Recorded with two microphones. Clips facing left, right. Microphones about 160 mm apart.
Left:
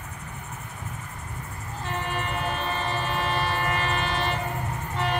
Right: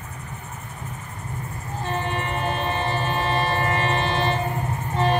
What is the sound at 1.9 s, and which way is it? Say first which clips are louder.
Train: right 3 dB; 30° right (ahead or behind).